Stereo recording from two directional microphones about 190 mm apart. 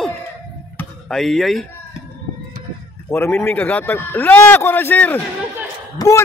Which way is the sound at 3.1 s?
10° left (ahead or behind).